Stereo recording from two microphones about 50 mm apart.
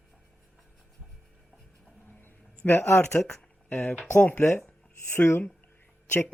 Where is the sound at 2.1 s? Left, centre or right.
Left.